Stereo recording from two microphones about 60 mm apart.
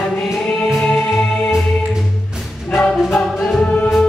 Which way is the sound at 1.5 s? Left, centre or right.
Centre.